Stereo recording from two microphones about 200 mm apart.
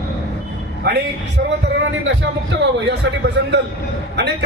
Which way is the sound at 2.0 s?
60° right (ahead or behind).